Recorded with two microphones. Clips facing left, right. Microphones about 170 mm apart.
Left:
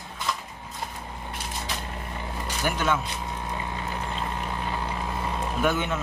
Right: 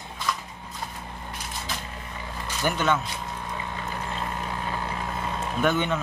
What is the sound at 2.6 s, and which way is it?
Speech, 10° left (ahead or behind).